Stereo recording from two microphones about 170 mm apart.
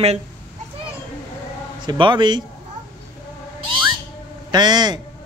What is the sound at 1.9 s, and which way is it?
Speech, 30° right (ahead or behind).